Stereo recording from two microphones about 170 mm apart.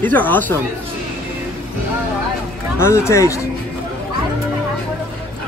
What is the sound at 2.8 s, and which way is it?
Speech, 15° left (ahead or behind).